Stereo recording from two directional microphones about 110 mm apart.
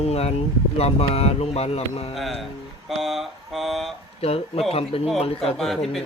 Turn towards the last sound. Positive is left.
turn(degrees=5)  # may be behind; listen again after turning